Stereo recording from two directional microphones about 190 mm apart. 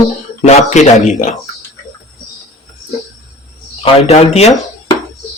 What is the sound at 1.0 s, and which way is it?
Speech, 40° left (ahead or behind).